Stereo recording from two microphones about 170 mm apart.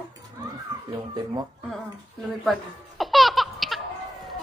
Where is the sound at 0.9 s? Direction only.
25° right (ahead or behind).